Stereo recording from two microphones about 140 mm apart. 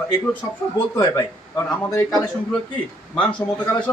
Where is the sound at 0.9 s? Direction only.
20° left (ahead or behind).